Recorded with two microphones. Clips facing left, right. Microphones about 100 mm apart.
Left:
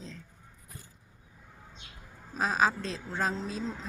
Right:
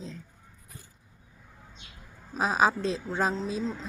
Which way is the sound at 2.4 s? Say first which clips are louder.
Right 3 dB; 15° right (ahead or behind).